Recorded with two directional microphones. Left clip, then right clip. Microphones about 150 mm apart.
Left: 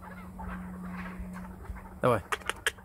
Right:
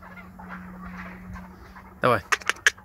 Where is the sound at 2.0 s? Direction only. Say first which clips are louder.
Right 6 dB; 10° right (ahead or behind).